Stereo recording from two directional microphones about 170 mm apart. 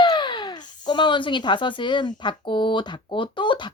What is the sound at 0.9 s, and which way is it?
Speech, 30° left (ahead or behind).